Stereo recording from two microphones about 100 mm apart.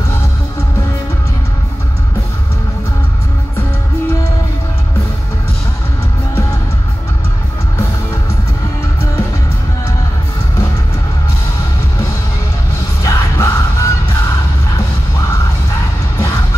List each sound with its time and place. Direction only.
13.0 s music: 30° left (ahead or behind)